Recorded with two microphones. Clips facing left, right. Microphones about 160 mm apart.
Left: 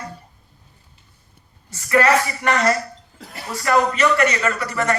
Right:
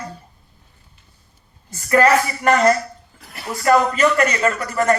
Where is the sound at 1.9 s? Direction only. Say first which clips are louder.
Right 2 dB; 40° right (ahead or behind).